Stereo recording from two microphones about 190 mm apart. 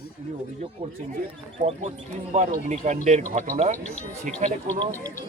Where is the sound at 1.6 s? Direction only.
35° right (ahead or behind).